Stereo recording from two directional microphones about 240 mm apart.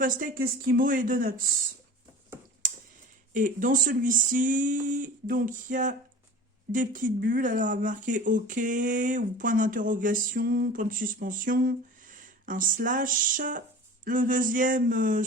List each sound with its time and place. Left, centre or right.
0.0 s speech: right
2.6 s tick-tock: right
3.3 s speech: right